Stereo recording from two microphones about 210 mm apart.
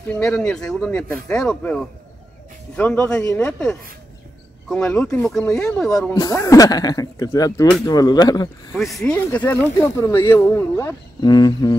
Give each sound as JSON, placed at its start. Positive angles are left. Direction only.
{"t": 0.1, "sound": "speech", "side_deg": 5}
{"t": 6.1, "sound": "speech", "side_deg": 15}
{"t": 8.7, "sound": "speech", "side_deg": 0}